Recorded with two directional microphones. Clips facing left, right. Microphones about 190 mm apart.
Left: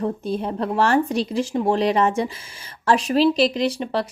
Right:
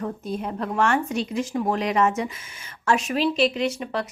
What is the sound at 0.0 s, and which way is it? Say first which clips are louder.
Speech: left 5 dB; 30° left (ahead or behind).